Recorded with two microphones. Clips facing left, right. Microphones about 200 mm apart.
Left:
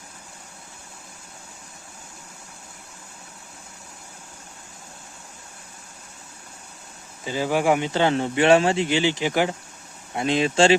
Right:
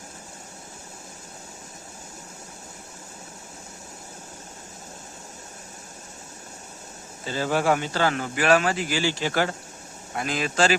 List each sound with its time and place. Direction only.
7.3 s speech: 15° left (ahead or behind)